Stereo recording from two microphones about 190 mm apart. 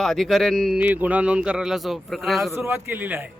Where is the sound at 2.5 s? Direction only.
10° right (ahead or behind).